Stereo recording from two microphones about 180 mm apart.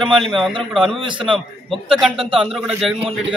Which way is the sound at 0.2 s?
Centre (ahead or behind).